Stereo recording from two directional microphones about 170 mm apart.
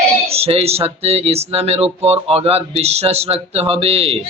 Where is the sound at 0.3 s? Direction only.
35° right (ahead or behind).